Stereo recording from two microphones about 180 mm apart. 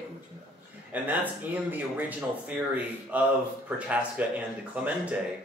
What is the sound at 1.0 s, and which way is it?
Speech, 10° right (ahead or behind).